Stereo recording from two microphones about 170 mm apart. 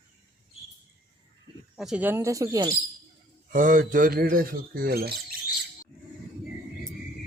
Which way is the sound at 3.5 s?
55° right (ahead or behind).